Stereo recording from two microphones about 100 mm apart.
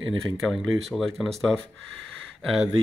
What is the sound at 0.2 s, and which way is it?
Speech, centre (ahead or behind).